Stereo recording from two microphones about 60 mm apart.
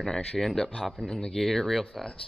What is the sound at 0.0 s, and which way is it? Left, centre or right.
Speech, centre.